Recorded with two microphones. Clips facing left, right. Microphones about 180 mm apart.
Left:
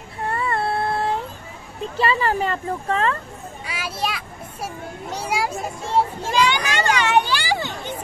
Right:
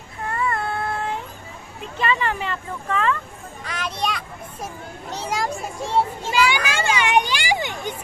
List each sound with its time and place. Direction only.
0.2 s a sound: 30° left (ahead or behind)
1.8 s speech: 35° left (ahead or behind)
3.6 s children playing: 5° left (ahead or behind)
5.1 s speech: 10° left (ahead or behind)
6.3 s children playing: 10° right (ahead or behind)